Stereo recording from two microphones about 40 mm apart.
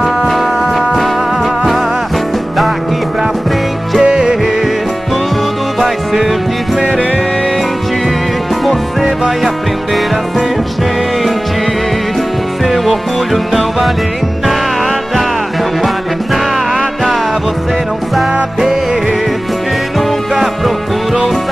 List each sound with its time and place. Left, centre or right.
0.3 s music: centre
4.0 s music: right
12.6 s music: centre
16.7 s music: centre
20.3 s music: centre